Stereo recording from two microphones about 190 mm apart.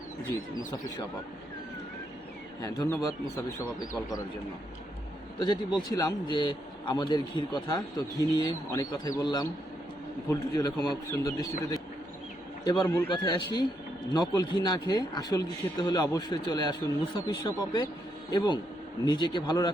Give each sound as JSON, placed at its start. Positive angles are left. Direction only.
{"t": 2.6, "sound": "speech", "side_deg": 20}
{"t": 5.4, "sound": "a man's voice", "side_deg": 20}
{"t": 12.6, "sound": "a man's voice", "side_deg": 20}